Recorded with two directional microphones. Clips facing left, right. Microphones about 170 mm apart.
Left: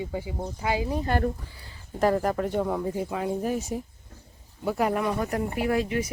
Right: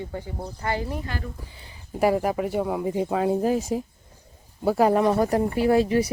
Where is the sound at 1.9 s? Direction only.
10° right (ahead or behind).